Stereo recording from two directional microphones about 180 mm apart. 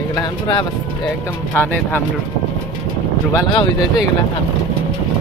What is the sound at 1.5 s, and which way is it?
Speech, 10° left (ahead or behind).